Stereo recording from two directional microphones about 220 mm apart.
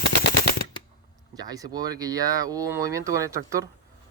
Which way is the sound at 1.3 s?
15° right (ahead or behind).